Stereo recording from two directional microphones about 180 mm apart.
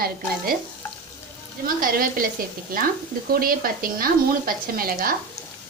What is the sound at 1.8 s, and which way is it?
Speech, 55° right (ahead or behind).